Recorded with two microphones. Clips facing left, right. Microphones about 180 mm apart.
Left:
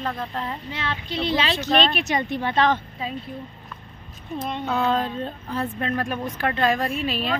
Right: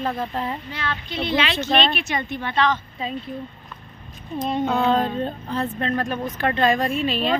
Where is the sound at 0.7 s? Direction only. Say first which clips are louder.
Right 1 dB; 25° left (ahead or behind).